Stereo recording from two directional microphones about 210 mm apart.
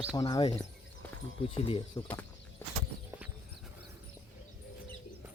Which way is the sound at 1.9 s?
15° left (ahead or behind).